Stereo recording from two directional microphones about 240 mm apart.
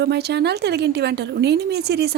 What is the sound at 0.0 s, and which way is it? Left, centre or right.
Speech, right.